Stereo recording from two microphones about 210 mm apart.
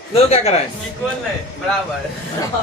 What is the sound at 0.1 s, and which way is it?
Speech, 30° left (ahead or behind).